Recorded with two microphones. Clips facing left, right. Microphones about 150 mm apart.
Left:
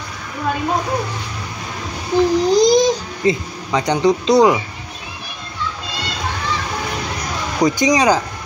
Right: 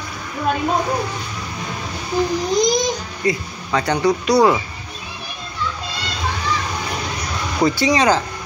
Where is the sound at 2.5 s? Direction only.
30° left (ahead or behind).